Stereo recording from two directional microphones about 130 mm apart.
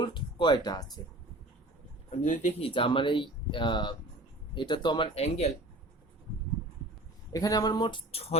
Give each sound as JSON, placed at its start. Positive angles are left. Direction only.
{"t": 0.0, "sound": "a sound", "side_deg": 40}
{"t": 2.0, "sound": "speech", "side_deg": 70}
{"t": 2.6, "sound": "speech", "side_deg": 45}
{"t": 5.1, "sound": "speech", "side_deg": 55}
{"t": 7.3, "sound": "speech", "side_deg": 30}